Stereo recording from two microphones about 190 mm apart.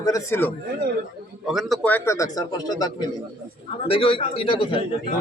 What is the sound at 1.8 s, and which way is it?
A man's voice, 10° left (ahead or behind).